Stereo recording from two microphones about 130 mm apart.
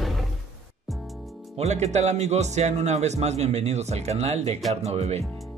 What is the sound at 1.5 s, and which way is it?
Speech, 60° right (ahead or behind).